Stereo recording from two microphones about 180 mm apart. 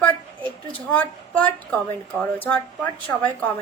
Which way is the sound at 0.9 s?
5° left (ahead or behind).